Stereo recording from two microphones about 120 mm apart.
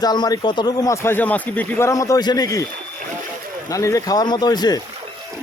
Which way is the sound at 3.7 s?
25° left (ahead or behind).